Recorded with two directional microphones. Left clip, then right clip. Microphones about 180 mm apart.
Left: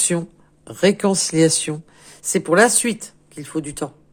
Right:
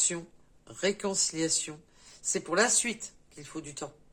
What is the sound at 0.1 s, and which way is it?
Speech, 40° left (ahead or behind).